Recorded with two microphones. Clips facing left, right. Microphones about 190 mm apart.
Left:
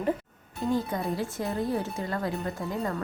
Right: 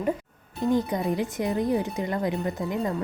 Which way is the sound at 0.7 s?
20° right (ahead or behind).